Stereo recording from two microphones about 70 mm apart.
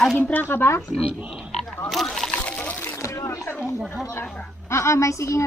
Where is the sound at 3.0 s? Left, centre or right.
Left.